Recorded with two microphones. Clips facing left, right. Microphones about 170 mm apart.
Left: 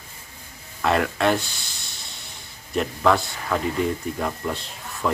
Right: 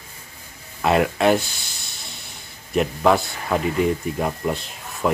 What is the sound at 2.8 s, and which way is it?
Speech, 15° right (ahead or behind).